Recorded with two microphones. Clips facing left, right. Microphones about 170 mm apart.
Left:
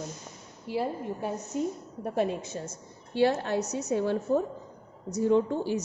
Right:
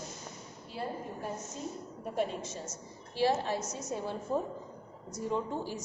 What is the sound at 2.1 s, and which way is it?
A woman's voice, 70° left (ahead or behind).